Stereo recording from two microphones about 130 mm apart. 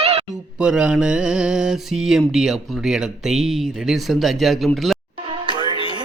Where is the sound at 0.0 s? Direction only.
50° right (ahead or behind).